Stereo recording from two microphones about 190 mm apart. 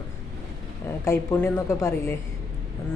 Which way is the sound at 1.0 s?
10° left (ahead or behind).